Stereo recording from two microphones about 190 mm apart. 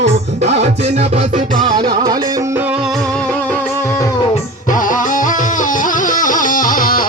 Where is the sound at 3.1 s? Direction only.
10° left (ahead or behind).